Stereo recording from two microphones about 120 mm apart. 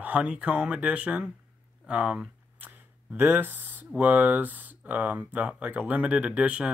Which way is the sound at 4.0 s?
15° right (ahead or behind).